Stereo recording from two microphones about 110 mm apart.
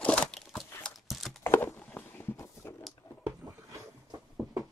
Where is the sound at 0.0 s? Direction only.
10° left (ahead or behind).